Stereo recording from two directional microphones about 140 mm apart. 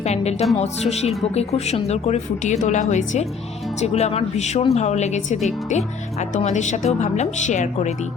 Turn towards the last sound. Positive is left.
turn(degrees=55)  # may be behind; listen again after turning